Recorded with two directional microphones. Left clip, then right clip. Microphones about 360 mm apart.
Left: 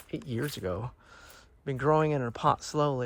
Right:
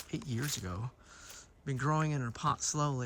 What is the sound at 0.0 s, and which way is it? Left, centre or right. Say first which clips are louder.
Speech: left 5 dB; centre.